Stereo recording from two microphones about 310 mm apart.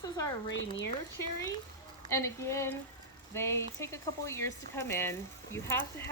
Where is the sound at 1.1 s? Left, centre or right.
Left.